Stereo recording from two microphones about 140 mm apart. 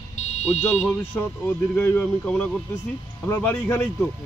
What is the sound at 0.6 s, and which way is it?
A man's voice, 10° left (ahead or behind).